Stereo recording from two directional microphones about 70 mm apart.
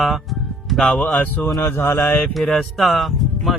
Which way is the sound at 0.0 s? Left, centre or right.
Centre.